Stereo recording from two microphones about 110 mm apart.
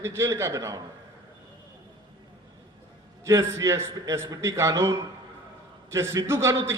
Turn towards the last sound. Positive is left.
turn(degrees=-25)  # may be behind; listen again after turning